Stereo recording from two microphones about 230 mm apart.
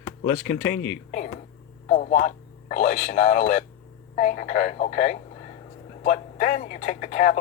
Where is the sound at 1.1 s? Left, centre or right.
Left.